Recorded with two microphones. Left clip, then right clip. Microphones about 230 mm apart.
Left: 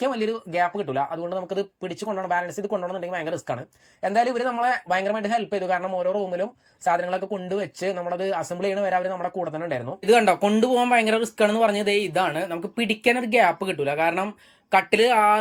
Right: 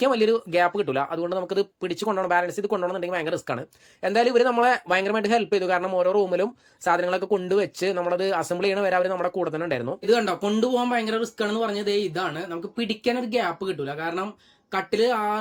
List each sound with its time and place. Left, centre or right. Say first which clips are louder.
0.0 s speech: right 5 dB; centre
9.1 s speech: right 2 dB; right
10.1 s speech: left 5 dB; centre